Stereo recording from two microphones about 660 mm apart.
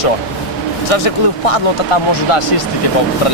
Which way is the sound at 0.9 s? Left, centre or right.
Left.